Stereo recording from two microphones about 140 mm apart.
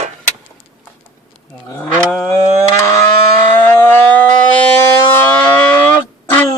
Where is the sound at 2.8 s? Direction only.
20° left (ahead or behind).